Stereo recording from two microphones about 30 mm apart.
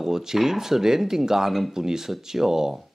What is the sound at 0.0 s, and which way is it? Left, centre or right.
Speech, centre.